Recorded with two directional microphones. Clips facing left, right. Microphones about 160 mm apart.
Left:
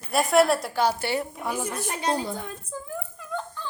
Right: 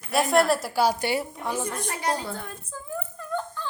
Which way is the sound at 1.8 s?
20° left (ahead or behind).